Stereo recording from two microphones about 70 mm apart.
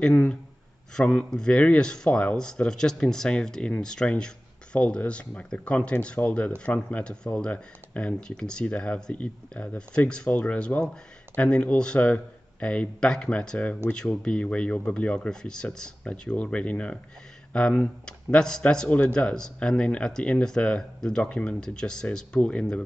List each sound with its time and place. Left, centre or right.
0.0 s speech: centre